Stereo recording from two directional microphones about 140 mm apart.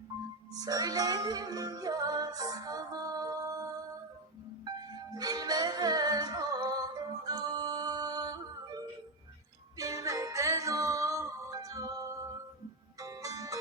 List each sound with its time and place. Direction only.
0.5 s music: 25° right (ahead or behind)
5.1 s music: 25° right (ahead or behind)